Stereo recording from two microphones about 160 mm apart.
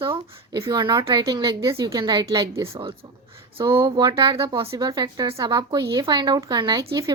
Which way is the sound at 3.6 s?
25° right (ahead or behind).